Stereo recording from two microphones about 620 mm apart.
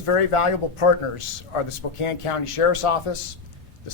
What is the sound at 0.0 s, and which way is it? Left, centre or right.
A man's voice, left.